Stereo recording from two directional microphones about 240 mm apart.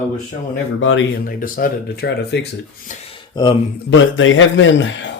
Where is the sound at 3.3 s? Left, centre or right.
Centre.